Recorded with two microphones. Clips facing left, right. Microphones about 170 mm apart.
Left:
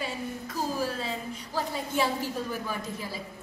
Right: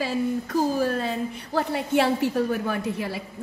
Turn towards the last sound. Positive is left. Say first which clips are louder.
# right 7 dB
turn(degrees=-65)  # may be behind; listen again after turning